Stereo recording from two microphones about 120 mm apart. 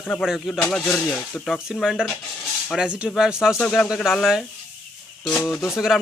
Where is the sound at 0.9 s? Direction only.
20° left (ahead or behind).